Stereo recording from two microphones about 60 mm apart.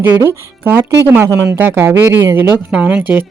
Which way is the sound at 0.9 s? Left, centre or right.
Right.